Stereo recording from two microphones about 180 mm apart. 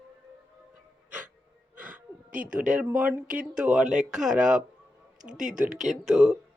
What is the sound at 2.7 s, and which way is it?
Speech, 5° right (ahead or behind).